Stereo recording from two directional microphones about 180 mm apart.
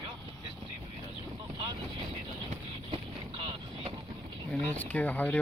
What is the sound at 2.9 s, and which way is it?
Boat, 30° right (ahead or behind).